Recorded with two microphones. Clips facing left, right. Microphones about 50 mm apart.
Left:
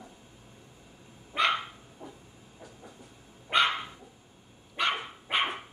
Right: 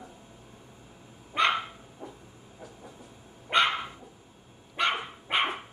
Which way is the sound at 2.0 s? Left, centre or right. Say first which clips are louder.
Right 2 dB; centre.